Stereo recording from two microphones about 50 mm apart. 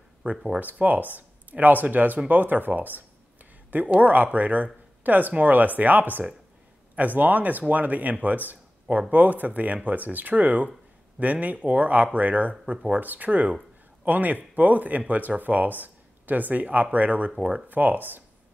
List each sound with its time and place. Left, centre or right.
0.2 s speech: right